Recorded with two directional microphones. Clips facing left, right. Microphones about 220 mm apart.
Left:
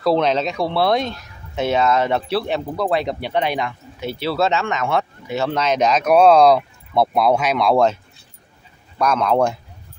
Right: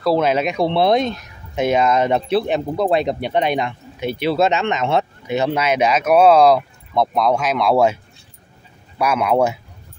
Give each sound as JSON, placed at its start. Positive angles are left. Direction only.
{"t": 0.0, "sound": "speech", "side_deg": -5}
{"t": 0.6, "sound": "speech", "side_deg": -20}